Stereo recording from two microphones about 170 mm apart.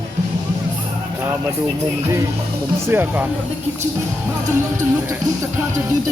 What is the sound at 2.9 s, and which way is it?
Speech, 10° right (ahead or behind).